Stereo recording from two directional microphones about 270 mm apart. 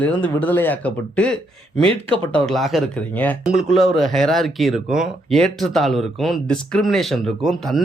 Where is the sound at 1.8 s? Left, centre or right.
Centre.